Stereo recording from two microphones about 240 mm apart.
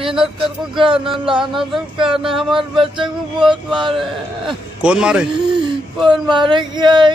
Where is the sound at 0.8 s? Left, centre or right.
Right.